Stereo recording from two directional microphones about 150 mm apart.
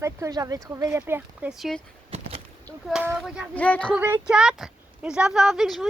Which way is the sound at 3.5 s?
10° left (ahead or behind).